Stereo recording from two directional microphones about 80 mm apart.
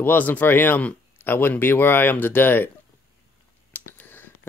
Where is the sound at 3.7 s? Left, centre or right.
Left.